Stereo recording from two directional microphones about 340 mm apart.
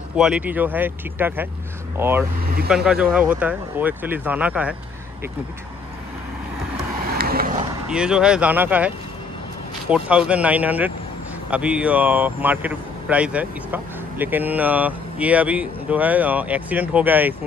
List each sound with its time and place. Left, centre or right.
0.1 s speech: centre
2.4 s speech: right
2.7 s speech: centre
7.2 s vehicle: right
7.9 s speech: centre